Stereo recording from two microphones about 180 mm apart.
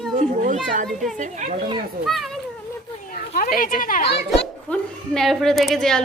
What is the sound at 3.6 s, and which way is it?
Speech, 50° left (ahead or behind).